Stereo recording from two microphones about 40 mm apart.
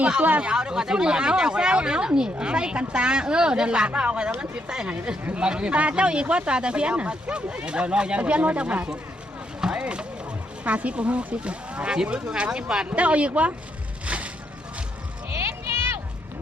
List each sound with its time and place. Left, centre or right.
0.2 s speech: right
0.4 s speech: right
5.4 s speech: right
10.6 s speech: right
12.9 s speech: right
14.0 s vehicle: right
15.4 s a sound: right